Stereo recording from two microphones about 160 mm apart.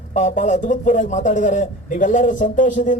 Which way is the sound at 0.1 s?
45° left (ahead or behind).